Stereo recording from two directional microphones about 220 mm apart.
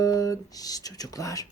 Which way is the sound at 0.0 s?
15° left (ahead or behind).